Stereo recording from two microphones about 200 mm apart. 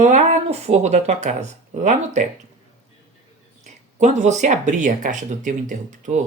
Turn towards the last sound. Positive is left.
turn(degrees=-40)  # may be behind; listen again after turning